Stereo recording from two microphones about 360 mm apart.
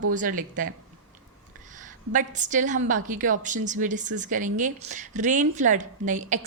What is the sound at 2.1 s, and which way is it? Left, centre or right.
Speech, right.